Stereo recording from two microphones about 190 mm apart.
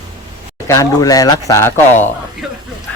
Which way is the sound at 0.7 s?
20° left (ahead or behind).